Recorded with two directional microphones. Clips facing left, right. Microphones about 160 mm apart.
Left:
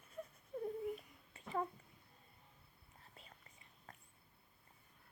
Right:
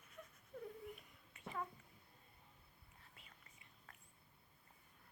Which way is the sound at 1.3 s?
35° left (ahead or behind).